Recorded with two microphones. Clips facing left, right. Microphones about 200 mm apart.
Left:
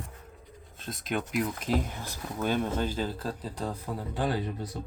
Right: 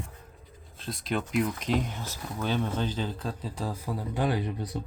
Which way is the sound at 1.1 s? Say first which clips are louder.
Right 2 dB; centre (ahead or behind).